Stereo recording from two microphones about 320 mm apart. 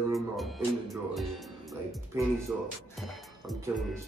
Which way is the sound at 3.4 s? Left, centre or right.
Centre.